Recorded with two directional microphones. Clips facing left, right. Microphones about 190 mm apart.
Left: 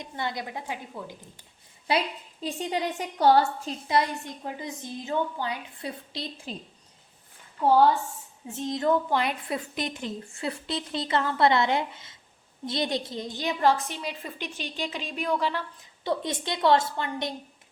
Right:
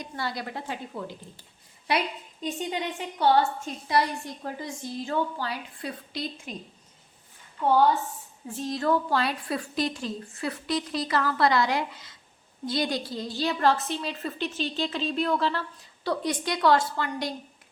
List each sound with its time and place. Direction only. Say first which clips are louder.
0.0 s a woman's voice: even; 20° left (ahead or behind)
1.9 s a woman's voice: left 1 dB; 30° left (ahead or behind)
3.8 s a woman's voice: even; 20° left (ahead or behind)
7.6 s a woman's voice: left 1 dB; 30° left (ahead or behind); by 15.6 s 15° left (ahead or behind)
16.0 s a woman's voice: right 1 dB; 25° left (ahead or behind)